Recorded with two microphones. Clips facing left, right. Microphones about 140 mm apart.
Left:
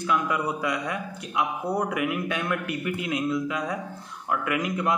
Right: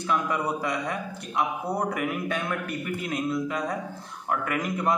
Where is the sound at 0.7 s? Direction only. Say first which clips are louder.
Left 1 dB; 45° right (ahead or behind).